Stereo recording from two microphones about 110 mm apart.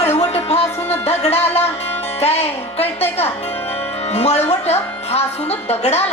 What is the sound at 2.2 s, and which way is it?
Speech, 70° left (ahead or behind).